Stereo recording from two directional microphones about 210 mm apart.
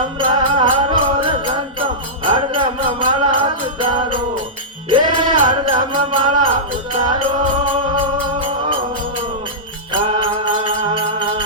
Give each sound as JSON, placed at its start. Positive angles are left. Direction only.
{"t": 0.2, "sound": "music", "side_deg": -25}
{"t": 9.9, "sound": "music", "side_deg": -25}